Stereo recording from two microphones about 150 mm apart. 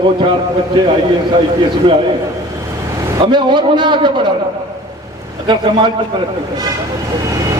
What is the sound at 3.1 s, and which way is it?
A man's voice, 30° right (ahead or behind).